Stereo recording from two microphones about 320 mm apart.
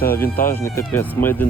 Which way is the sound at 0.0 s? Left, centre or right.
Centre.